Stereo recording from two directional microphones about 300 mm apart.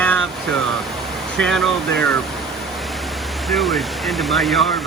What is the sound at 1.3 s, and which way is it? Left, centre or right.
Speech, centre.